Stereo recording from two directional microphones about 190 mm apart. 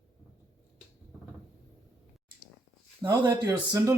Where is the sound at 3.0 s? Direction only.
20° right (ahead or behind).